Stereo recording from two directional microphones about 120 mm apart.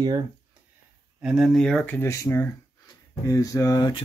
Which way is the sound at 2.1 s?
25° left (ahead or behind).